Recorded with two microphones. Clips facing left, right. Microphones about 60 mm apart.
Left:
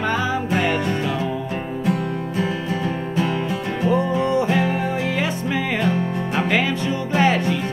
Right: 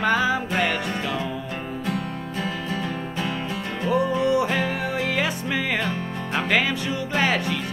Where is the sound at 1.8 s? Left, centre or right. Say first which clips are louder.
Left 7 dB; left.